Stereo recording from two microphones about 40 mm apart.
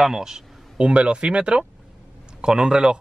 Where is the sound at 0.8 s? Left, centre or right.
Right.